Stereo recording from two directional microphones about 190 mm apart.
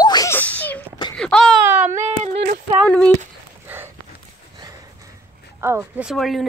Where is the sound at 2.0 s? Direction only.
40° right (ahead or behind).